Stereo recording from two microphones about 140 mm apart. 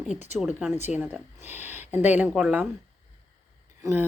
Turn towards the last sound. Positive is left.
turn(degrees=-15)  # may be behind; listen again after turning